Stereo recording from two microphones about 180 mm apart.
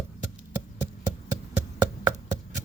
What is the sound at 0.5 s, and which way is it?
Hammer, 15° right (ahead or behind).